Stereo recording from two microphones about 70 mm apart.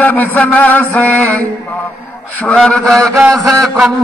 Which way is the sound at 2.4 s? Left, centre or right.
Centre.